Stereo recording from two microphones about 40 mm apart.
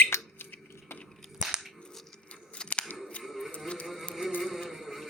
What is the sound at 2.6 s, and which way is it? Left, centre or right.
Scissors, left.